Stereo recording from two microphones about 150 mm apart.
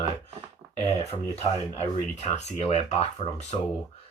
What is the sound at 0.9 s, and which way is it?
Speech, 45° left (ahead or behind).